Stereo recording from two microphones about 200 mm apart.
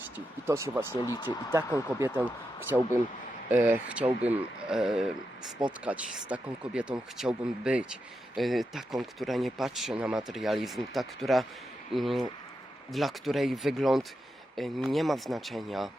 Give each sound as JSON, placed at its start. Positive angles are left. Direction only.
{"t": 0.4, "sound": "speech", "side_deg": -15}
{"t": 1.0, "sound": "speech", "side_deg": 20}
{"t": 1.5, "sound": "speech", "side_deg": -15}